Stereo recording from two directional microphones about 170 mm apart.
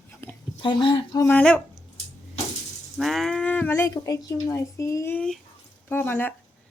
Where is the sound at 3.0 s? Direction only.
Centre (ahead or behind).